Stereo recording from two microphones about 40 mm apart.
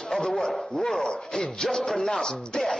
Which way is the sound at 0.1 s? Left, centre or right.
Centre.